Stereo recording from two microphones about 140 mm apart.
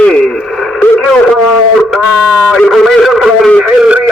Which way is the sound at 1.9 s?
Centre (ahead or behind).